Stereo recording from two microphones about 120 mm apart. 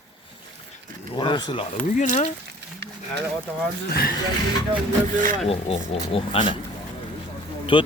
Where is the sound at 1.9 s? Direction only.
90° left.